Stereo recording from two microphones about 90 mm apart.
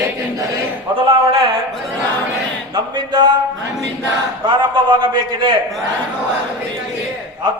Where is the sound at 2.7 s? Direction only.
55° right (ahead or behind).